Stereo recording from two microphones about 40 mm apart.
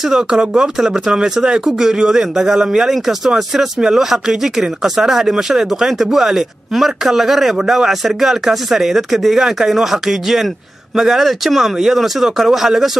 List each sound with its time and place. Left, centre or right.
0.0 s speech: centre